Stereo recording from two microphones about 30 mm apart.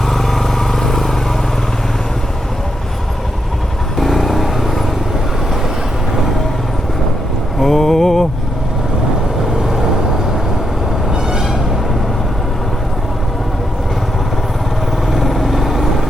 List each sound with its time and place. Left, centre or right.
0.1 s vehicle: centre
3.9 s vehicle: centre
7.6 s mantra: centre
11.1 s vehicle: right
15.1 s vehicle: centre